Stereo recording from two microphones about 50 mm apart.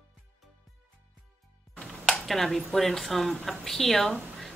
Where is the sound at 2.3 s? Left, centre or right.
Centre.